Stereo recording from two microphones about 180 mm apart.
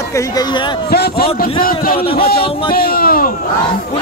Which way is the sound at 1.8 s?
55° left (ahead or behind).